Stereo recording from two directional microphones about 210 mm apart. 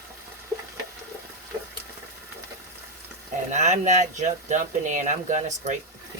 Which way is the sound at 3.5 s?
35° right (ahead or behind).